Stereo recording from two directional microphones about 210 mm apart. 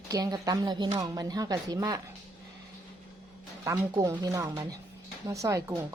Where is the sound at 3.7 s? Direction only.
15° right (ahead or behind).